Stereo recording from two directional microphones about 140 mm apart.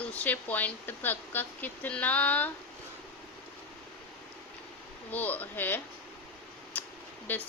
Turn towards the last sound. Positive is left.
turn(degrees=10)  # may be behind; listen again after turning